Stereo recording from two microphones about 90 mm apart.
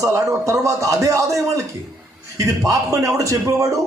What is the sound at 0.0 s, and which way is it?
A man's voice, 35° right (ahead or behind).